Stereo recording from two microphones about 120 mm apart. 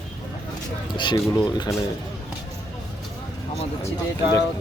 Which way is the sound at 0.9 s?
40° left (ahead or behind).